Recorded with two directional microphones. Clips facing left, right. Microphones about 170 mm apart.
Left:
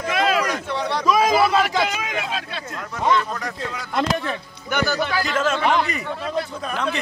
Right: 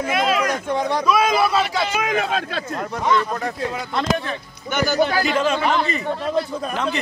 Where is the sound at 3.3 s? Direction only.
25° right (ahead or behind).